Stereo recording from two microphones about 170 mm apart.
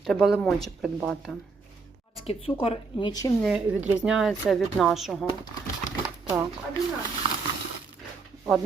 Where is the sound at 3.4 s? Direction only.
5° right (ahead or behind).